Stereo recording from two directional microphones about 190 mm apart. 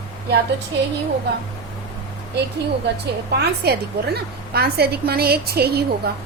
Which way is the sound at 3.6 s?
60° right (ahead or behind).